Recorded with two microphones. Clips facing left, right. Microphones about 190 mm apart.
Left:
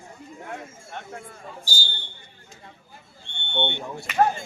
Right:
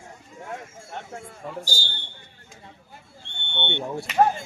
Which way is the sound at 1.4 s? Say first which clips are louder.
Right 10 dB; 80° right.